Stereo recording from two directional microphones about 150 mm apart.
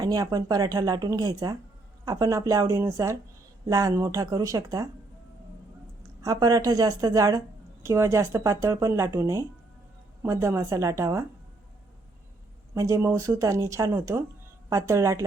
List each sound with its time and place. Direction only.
0.0 s speech: 25° right (ahead or behind)
6.0 s speech: 25° right (ahead or behind)
12.7 s speech: 20° right (ahead or behind)